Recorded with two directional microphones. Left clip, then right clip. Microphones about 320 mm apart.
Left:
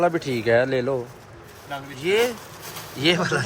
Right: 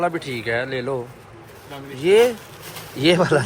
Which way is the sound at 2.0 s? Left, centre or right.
Centre.